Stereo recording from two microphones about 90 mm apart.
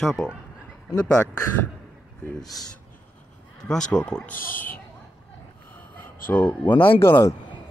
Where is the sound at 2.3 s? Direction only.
5° left (ahead or behind).